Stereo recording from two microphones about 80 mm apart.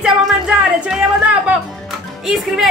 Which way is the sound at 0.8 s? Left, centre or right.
Centre.